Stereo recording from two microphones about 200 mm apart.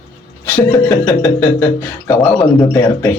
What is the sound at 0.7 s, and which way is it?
A man's voice, 15° left (ahead or behind).